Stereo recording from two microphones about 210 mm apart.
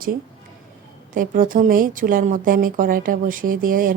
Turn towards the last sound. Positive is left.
turn(degrees=-40)  # may be behind; listen again after turning